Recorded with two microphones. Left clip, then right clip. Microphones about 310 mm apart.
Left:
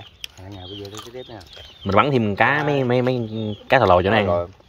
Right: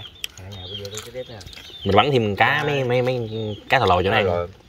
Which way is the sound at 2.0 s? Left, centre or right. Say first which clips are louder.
Even; centre.